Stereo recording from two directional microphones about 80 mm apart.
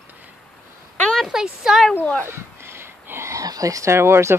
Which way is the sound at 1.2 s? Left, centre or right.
Centre.